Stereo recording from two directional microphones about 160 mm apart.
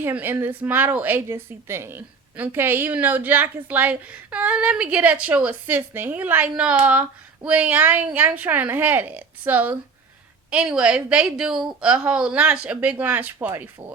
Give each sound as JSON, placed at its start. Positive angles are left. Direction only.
{"t": 0.0, "sound": "a woman's voice", "side_deg": -10}